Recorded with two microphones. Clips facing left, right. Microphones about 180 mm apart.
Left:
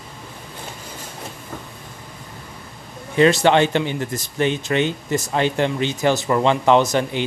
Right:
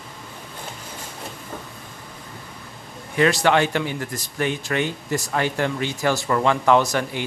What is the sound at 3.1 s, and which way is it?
Speech, 25° left (ahead or behind).